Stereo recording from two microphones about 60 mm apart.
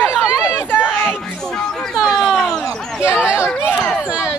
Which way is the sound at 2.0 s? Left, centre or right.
Centre.